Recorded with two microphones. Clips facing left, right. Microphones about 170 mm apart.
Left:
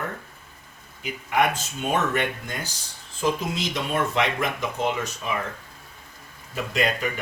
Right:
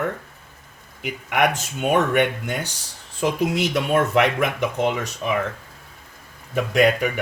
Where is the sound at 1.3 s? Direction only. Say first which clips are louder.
Right 2 dB; 70° right (ahead or behind).